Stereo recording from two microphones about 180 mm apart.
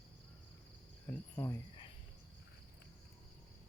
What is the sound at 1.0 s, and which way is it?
Cricket, 15° left (ahead or behind).